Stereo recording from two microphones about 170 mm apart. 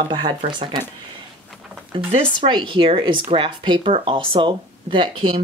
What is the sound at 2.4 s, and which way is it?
Speech, 30° right (ahead or behind).